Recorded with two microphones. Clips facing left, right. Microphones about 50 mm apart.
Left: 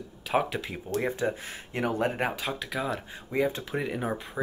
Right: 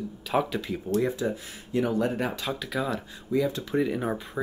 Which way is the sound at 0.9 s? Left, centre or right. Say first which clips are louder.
Right 2 dB; left.